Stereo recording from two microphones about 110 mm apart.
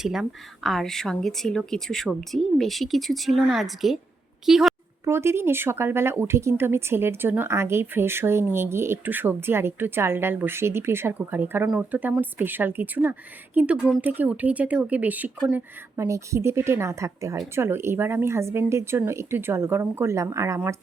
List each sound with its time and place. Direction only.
0.0 s a woman's voice: 5° right (ahead or behind)
5.0 s speech: 25° right (ahead or behind)
16.0 s speech: 25° right (ahead or behind)